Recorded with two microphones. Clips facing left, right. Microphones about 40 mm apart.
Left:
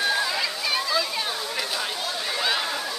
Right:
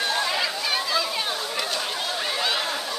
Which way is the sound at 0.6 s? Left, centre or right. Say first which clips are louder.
Even; centre.